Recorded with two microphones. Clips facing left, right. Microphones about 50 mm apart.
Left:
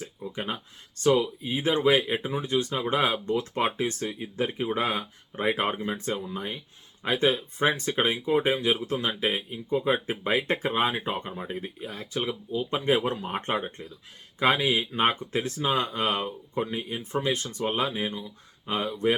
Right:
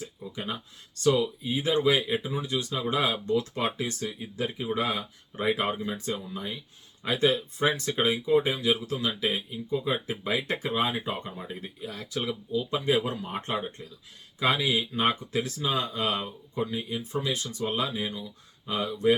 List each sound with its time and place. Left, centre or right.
0.3 s speech: left